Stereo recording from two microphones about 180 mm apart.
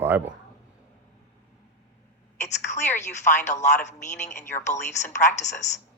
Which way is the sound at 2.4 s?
40° left (ahead or behind).